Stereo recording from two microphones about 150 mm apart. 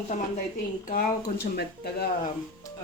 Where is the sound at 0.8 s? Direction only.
70° left (ahead or behind); by 2.1 s 90° left.